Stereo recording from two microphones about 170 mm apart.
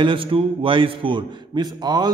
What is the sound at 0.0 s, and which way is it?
A man's voice, 30° right (ahead or behind).